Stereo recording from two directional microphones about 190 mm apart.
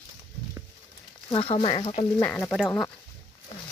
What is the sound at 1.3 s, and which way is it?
Speech, 30° left (ahead or behind).